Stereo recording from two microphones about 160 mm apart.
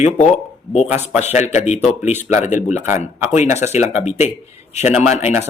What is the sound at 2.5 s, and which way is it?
Speech, 50° left (ahead or behind).